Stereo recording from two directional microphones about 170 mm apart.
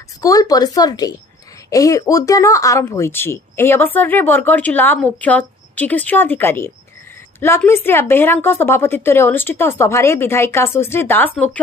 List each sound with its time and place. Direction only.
0.2 s speech: 20° left (ahead or behind)